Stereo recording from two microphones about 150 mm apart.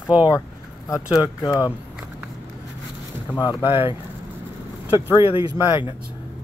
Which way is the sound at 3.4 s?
30° left (ahead or behind).